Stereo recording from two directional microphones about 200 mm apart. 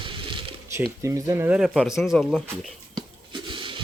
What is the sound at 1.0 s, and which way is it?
A man's voice, 15° right (ahead or behind).